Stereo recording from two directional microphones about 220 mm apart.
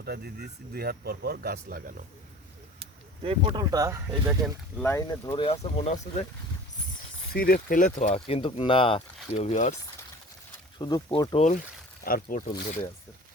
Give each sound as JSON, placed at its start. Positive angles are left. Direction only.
{"t": 0.0, "sound": "speech", "side_deg": -45}
{"t": 3.2, "sound": "speech", "side_deg": -20}
{"t": 4.1, "sound": "speech", "side_deg": 0}
{"t": 4.9, "sound": "speech", "side_deg": 10}
{"t": 7.3, "sound": "speech", "side_deg": 40}
{"t": 10.8, "sound": "speech", "side_deg": 20}
{"t": 12.0, "sound": "speech", "side_deg": 40}